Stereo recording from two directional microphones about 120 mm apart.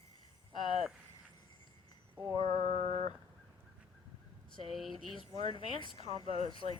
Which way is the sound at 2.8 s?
70° right (ahead or behind).